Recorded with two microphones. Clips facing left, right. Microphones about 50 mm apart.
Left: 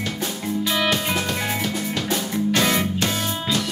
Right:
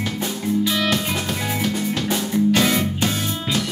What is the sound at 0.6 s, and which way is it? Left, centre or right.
Music, centre.